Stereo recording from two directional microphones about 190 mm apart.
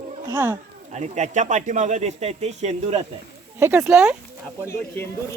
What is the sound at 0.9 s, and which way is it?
Speech, 35° right (ahead or behind).